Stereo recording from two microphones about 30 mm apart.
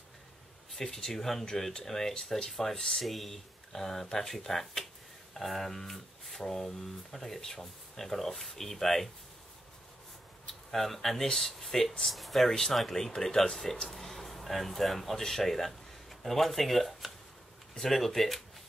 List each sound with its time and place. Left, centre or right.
0.9 s speech: centre
3.0 s speech: centre
10.7 s speech: centre
12.4 s speech: centre